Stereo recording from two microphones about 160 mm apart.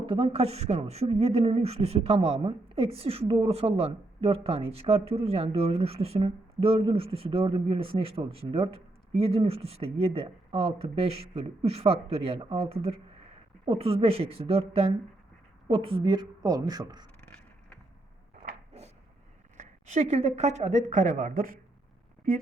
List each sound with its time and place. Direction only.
0.0 s a woman's voice: 35° right (ahead or behind)
18.4 s a sound: 60° right (ahead or behind)
19.5 s speech: 50° right (ahead or behind)